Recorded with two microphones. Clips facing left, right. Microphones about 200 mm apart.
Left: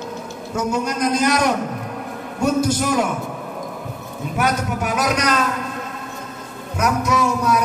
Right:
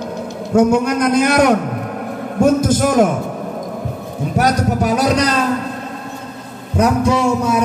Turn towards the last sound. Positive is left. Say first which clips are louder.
# right 3 dB
turn(degrees=-30)  # may be behind; listen again after turning